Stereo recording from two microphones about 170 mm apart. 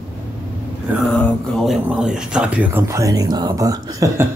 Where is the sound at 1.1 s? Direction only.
Centre (ahead or behind); by 4.3 s 20° right (ahead or behind).